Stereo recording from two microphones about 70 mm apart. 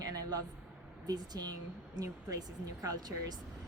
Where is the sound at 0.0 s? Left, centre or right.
Right.